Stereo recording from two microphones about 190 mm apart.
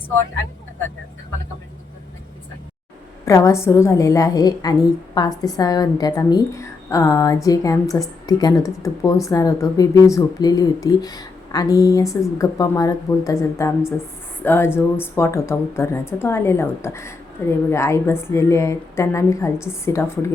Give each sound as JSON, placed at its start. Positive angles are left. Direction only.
{"t": 3.2, "sound": "a woman's voice", "side_deg": 15}